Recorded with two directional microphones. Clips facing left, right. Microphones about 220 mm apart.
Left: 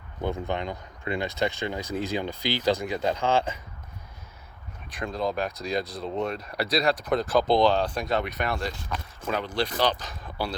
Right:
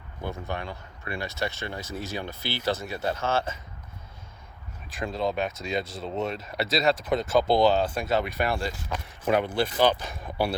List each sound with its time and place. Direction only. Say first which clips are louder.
0.3 s speech: left 4 dB; 20° left (ahead or behind)
5.0 s speech: even; centre (ahead or behind)
6.6 s speech: left 1 dB; 25° right (ahead or behind)
7.0 s speech: even; centre (ahead or behind)